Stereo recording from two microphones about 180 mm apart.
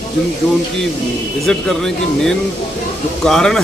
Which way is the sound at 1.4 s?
Centre (ahead or behind).